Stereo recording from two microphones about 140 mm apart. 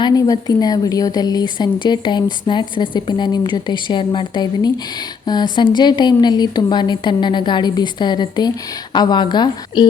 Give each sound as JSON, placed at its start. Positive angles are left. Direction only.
{"t": 0.0, "sound": "a woman's voice", "side_deg": 25}